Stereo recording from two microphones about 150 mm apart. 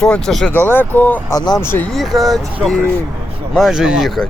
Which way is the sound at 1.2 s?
25° left (ahead or behind).